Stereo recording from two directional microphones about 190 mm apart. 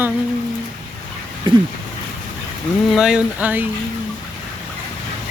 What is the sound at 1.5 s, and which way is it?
Speech, 25° right (ahead or behind).